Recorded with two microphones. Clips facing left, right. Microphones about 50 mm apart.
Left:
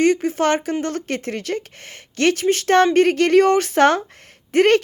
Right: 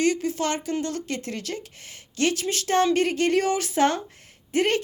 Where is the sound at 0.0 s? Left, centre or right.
Left.